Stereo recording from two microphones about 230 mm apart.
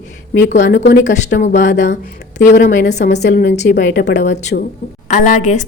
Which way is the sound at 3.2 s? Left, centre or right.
Left.